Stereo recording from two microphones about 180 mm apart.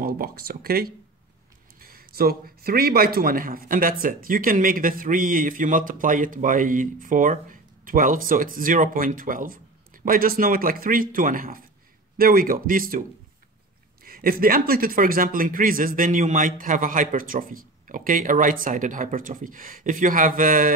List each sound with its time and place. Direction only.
0.0 s a man's voice: 55° right (ahead or behind)
14.0 s speech: 55° right (ahead or behind)